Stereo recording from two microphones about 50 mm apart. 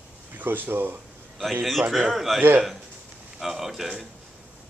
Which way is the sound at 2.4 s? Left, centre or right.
Right.